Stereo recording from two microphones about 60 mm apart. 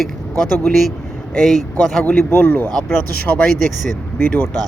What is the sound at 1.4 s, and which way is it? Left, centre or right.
Speech, centre.